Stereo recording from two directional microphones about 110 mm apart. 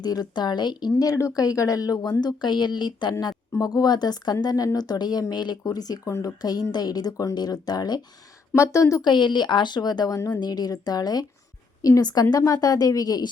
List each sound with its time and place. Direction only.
0.0 s speech: 40° left (ahead or behind)
8.5 s a woman's voice: 25° left (ahead or behind)
9.0 s speech: 45° left (ahead or behind)